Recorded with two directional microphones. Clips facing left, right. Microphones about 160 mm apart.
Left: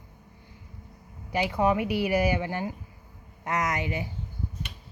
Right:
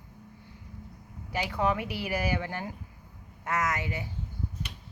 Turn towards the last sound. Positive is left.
turn(degrees=15)  # may be behind; listen again after turning